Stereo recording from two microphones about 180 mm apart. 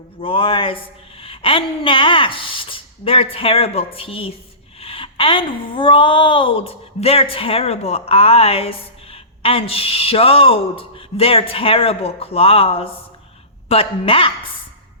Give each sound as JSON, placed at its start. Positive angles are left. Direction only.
{"t": 0.2, "sound": "speech", "side_deg": 30}